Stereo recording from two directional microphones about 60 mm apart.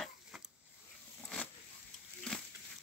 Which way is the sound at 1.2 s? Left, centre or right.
Centre.